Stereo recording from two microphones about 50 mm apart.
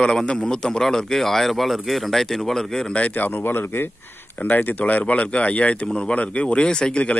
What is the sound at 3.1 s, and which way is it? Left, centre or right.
Speech, left.